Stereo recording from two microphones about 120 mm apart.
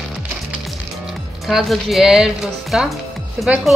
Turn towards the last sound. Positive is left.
turn(degrees=-5)  # may be behind; listen again after turning